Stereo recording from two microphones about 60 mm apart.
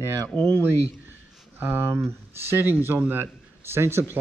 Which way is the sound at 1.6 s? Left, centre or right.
Right.